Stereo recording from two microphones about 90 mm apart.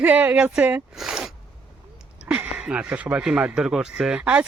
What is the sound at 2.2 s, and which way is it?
A woman's voice, 15° right (ahead or behind).